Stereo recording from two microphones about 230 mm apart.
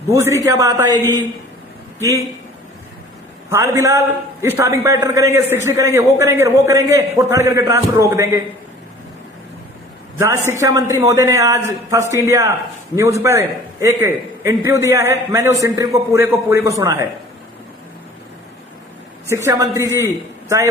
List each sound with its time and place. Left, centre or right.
0.1 s a man's voice: centre
0.9 s a man's voice: centre
3.5 s a man's voice: centre
10.2 s a man's voice: centre
19.3 s a man's voice: centre